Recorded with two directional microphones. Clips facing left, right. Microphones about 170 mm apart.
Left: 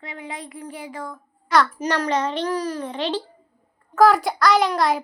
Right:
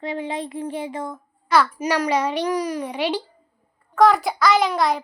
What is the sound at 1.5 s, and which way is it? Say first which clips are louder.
A child's voice: right 1 dB; 10° right (ahead or behind).